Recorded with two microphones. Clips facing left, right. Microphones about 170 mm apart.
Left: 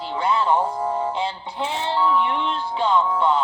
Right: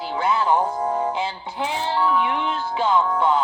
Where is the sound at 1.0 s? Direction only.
5° right (ahead or behind).